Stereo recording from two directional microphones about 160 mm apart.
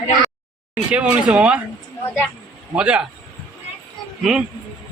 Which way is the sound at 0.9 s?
5° right (ahead or behind).